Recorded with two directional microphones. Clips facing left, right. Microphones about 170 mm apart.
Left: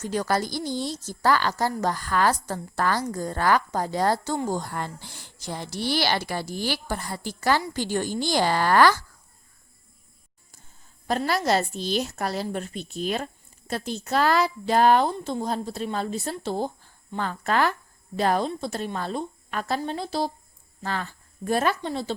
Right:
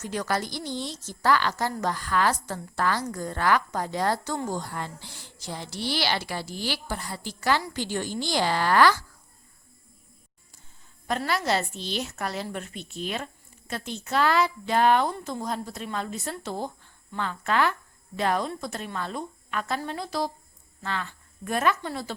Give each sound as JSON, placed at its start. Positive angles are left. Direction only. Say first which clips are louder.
{"t": 0.0, "sound": "a woman's voice", "louder": "left 3 dB", "side_deg": 35}
{"t": 4.5, "sound": "speech", "louder": "left 3 dB", "side_deg": 50}
{"t": 11.3, "sound": "a woman's voice", "louder": "left 3 dB", "side_deg": 40}
{"t": 15.1, "sound": "a woman's voice", "louder": "left 4 dB", "side_deg": 25}